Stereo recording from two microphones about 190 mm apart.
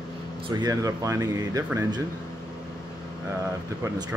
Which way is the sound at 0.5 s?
20° right (ahead or behind).